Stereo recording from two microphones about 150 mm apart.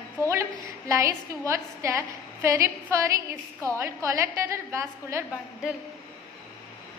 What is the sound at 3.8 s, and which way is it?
A woman's voice, 20° right (ahead or behind).